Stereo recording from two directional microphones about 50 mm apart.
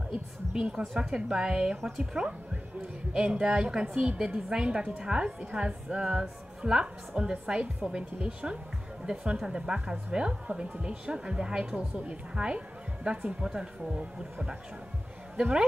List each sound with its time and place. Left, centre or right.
0.1 s a woman's voice: centre
1.8 s speech: centre
2.1 s a woman's voice: right
11.8 s speech: right